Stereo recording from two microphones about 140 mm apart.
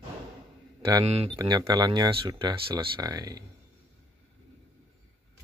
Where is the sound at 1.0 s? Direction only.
45° right (ahead or behind).